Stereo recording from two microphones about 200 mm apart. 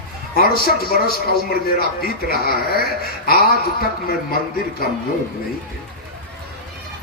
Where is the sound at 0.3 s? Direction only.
50° left (ahead or behind).